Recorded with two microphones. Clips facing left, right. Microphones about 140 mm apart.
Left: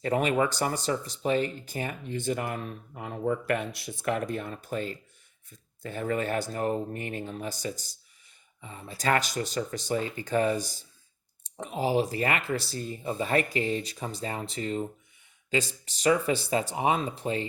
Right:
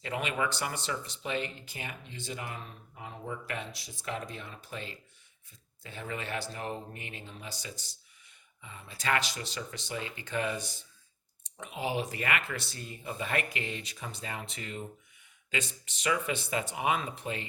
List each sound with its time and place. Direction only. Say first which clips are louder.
0.0 s speech: left 8 dB; 40° left (ahead or behind)